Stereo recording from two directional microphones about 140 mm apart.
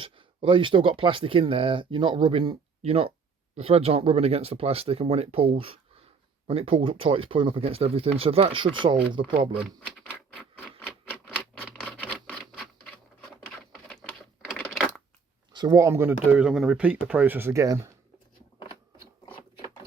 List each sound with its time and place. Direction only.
0.0 s speech: 35° right (ahead or behind)
9.6 s typewriter: 5° right (ahead or behind)
11.8 s a sound: 5° left (ahead or behind)
15.5 s speech: 25° right (ahead or behind)